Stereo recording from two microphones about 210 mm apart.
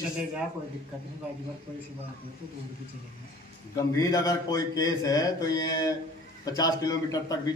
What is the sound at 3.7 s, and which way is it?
Speech, 15° left (ahead or behind).